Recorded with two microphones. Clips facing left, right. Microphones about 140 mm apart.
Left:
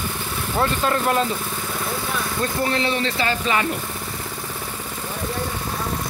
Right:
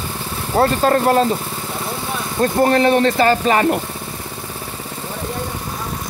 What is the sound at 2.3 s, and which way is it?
Speech, 45° right (ahead or behind).